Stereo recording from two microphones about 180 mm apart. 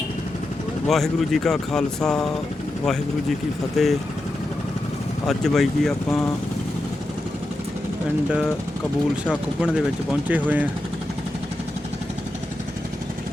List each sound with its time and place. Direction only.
0.9 s speech: centre (ahead or behind)
5.3 s speech: centre (ahead or behind)
9.3 s speech: 5° right (ahead or behind)